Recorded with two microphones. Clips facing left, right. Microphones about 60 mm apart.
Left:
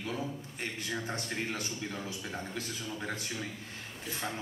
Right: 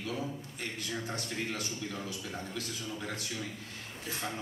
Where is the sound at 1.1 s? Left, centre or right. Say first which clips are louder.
Left 1 dB; left.